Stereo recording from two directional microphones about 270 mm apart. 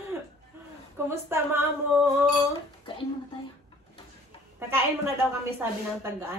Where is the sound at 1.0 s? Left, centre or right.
Centre.